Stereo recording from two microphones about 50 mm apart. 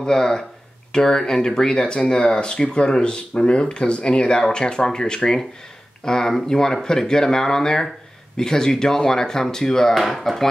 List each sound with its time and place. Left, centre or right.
0.0 s speech: centre